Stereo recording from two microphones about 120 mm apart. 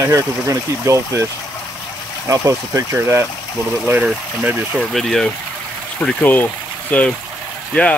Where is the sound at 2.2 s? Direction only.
25° right (ahead or behind).